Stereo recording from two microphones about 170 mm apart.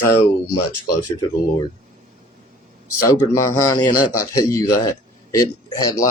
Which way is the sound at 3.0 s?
20° left (ahead or behind).